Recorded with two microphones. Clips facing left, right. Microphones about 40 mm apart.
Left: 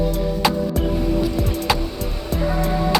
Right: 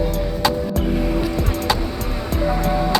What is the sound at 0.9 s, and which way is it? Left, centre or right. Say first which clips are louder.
Music: even; right.